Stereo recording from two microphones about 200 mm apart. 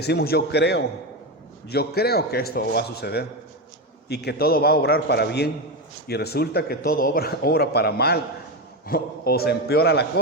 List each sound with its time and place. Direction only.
0.0 s a man's voice: 55° left (ahead or behind)